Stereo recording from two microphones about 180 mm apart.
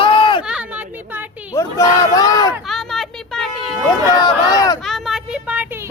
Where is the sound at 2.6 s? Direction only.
Centre (ahead or behind).